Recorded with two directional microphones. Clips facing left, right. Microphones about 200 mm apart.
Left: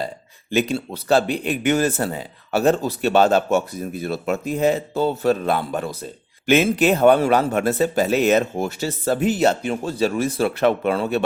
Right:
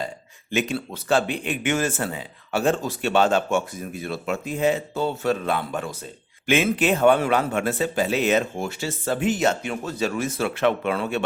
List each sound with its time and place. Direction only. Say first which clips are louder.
0.5 s speech: left 4 dB; 35° left (ahead or behind)